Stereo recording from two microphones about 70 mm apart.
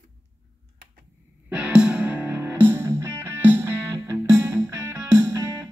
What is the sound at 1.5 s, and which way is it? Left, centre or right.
Music, centre.